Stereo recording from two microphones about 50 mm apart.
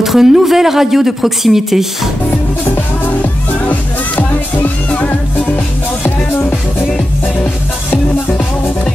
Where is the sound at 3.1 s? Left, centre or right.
Left.